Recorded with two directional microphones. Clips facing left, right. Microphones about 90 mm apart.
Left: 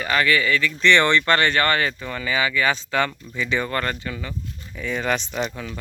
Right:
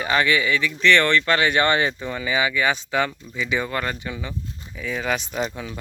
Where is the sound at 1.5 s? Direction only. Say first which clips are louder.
Right 1 dB; 20° right (ahead or behind).